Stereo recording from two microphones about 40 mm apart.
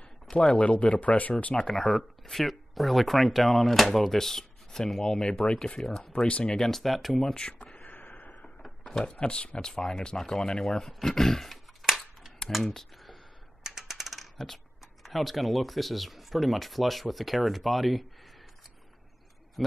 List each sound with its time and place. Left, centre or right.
0.3 s speech: centre
0.6 s speech: left
1.8 s speech: centre
6.1 s speech: left
6.5 s speech: centre
7.6 s a sound: left
8.6 s a sound: centre
9.1 s speech: left; by 11.6 s centre
11.8 s a sound: centre
12.4 s speech: centre
13.7 s mechanisms: centre
15.0 s speech: centre